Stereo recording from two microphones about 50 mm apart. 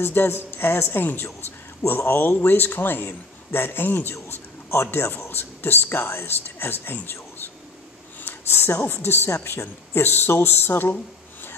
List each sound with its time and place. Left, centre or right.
0.0 s a man's voice: left
1.9 s a man's voice: left
2.3 s a man's voice: left
4.1 s a man's voice: left